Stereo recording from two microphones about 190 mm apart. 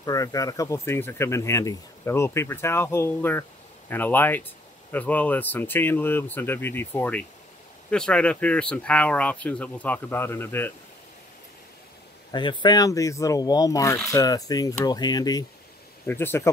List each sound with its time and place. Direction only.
0.0 s speech: 20° left (ahead or behind)
12.3 s speech: 25° left (ahead or behind)